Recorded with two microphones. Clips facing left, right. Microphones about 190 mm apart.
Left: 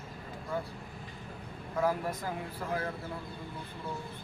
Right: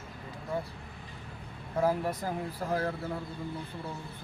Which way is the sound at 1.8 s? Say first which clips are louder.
Right 2 dB; 35° right (ahead or behind).